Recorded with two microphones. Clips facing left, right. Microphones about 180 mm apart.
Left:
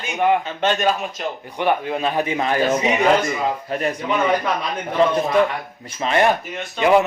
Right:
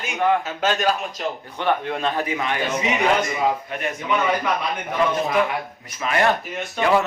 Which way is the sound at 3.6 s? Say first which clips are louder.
Left 4 dB; 35° left (ahead or behind).